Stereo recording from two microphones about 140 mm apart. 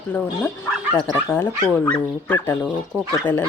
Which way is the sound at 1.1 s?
15° left (ahead or behind).